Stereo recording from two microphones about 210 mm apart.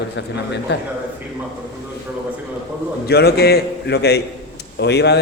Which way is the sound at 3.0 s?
50° left (ahead or behind).